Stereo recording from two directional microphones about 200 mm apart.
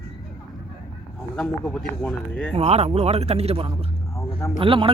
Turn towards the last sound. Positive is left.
turn(degrees=-25)  # may be behind; listen again after turning